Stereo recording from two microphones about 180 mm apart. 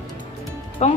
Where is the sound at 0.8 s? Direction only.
40° left (ahead or behind).